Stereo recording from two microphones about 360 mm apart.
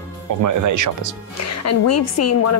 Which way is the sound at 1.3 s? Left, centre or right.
Left.